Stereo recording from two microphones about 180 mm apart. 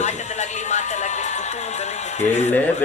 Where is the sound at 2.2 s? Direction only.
40° left (ahead or behind).